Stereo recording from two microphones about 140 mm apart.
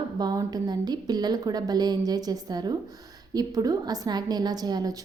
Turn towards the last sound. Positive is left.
turn(degrees=-30)  # may be behind; listen again after turning